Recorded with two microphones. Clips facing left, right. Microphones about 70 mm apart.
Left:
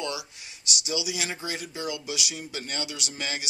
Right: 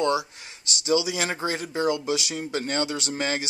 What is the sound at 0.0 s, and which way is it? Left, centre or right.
Speech, right.